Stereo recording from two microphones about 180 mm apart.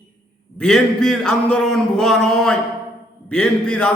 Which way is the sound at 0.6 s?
5° left (ahead or behind).